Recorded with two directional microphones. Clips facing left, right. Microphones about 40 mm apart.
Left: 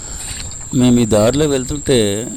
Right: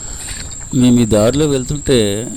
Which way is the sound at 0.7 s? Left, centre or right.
Centre.